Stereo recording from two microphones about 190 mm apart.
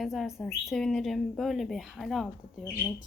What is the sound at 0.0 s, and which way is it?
A woman's voice, centre (ahead or behind).